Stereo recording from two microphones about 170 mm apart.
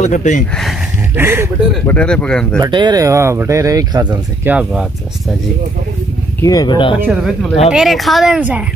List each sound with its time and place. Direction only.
0.0 s speech: 45° left (ahead or behind)
1.1 s speech: 15° right (ahead or behind)
1.9 s speech: 5° left (ahead or behind)
2.6 s speech: 25° right (ahead or behind)
4.5 s speech: 5° right (ahead or behind)
6.4 s speech: 20° left (ahead or behind)
7.1 s speech: centre (ahead or behind)